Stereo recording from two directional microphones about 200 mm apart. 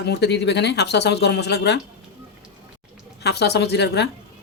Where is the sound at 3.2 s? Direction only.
55° left (ahead or behind).